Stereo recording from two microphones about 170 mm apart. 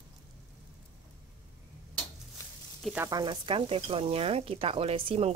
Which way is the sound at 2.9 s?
20° right (ahead or behind).